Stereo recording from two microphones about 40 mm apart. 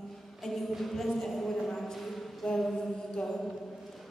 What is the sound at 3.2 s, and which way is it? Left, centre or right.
Mantra, centre.